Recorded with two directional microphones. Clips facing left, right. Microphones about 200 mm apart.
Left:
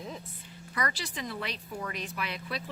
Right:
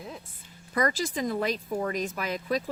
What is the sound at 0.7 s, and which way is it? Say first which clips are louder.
Speech: right 8 dB; 45° right (ahead or behind).